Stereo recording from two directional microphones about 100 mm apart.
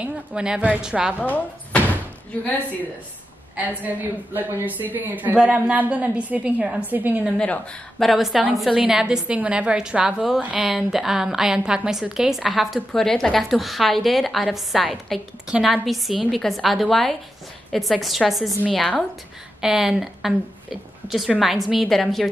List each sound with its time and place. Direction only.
0.0 s a woman's voice: 10° right (ahead or behind)
1.2 s door: 15° left (ahead or behind)
3.5 s a woman's voice: 15° right (ahead or behind)
7.3 s speech: 10° left (ahead or behind)
8.1 s a woman's voice: 5° right (ahead or behind)